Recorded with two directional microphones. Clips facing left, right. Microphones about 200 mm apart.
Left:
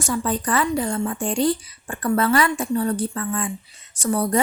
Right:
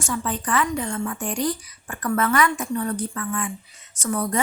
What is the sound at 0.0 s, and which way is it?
A woman's voice, 40° left (ahead or behind).